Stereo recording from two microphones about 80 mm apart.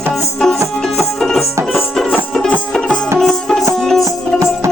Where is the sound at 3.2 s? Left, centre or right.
Centre.